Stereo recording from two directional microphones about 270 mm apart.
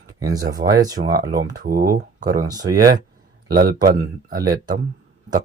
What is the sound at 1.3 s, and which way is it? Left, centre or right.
Speech, right.